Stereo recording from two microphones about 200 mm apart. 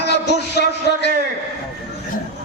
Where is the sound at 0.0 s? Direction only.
55° left (ahead or behind).